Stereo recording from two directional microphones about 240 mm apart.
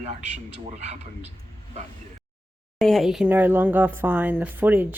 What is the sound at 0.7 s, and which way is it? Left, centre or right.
Speech, right.